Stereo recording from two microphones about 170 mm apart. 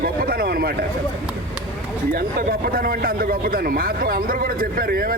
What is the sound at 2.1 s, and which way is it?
A man's voice, 60° right (ahead or behind).